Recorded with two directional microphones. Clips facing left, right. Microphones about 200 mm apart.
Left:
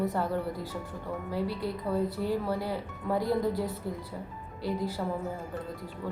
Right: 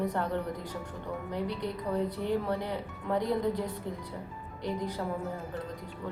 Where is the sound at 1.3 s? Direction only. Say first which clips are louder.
Left 2 dB; 20° right (ahead or behind).